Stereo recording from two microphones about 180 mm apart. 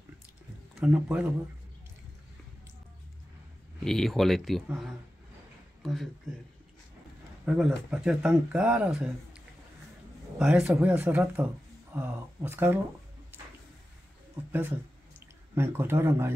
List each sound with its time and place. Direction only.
0.7 s a man's voice: 5° right (ahead or behind)
3.8 s speech: centre (ahead or behind)
5.8 s a sound: centre (ahead or behind)
7.4 s speech: 5° right (ahead or behind)
10.4 s speech: 5° right (ahead or behind)
15.1 s speech: 15° right (ahead or behind)